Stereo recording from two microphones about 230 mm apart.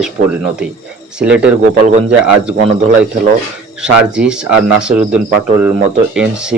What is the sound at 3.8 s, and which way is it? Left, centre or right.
Speech, centre.